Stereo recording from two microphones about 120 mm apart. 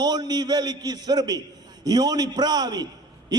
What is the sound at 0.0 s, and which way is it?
A man's voice, 35° right (ahead or behind).